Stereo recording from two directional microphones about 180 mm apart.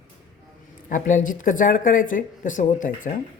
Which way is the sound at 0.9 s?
45° left (ahead or behind).